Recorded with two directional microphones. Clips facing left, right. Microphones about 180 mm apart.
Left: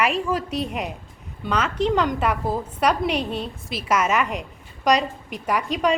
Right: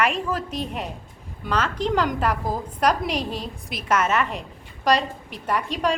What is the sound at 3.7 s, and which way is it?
Speech, 10° left (ahead or behind).